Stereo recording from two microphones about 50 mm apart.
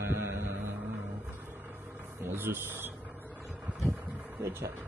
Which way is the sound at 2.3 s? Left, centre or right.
Right.